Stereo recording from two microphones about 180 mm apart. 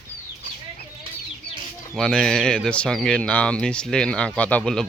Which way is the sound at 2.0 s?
5° left (ahead or behind).